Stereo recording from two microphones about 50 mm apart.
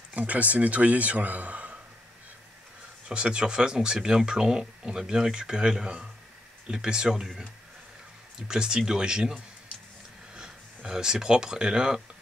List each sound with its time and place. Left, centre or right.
0.1 s speech: right
3.1 s speech: centre
8.4 s speech: centre
10.8 s speech: centre